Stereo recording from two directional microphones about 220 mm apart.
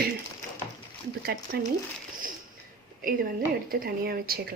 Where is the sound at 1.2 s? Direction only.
45° right (ahead or behind).